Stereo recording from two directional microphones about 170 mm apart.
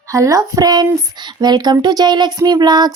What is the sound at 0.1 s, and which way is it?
Speech, 20° right (ahead or behind).